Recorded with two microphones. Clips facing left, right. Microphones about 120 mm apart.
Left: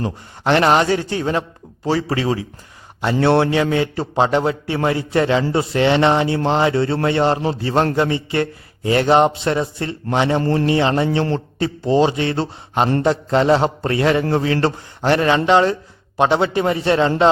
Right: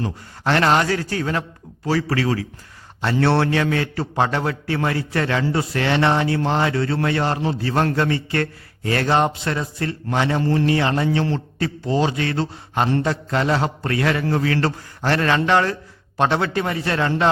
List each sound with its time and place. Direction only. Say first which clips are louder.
0.0 s a man's voice: left 3 dB; 20° left (ahead or behind)
10.4 s a man's voice: left 1 dB; 45° left (ahead or behind)
10.7 s a man's voice: left 3 dB; 25° left (ahead or behind)